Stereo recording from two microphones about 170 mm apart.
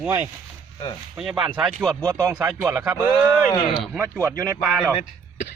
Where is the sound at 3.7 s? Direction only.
Centre (ahead or behind).